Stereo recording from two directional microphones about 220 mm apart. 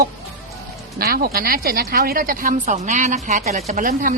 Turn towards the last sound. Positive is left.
turn(degrees=-35)  # may be behind; listen again after turning